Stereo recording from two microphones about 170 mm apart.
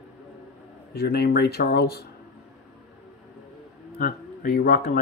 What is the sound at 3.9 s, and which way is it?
Speech, 65° left (ahead or behind).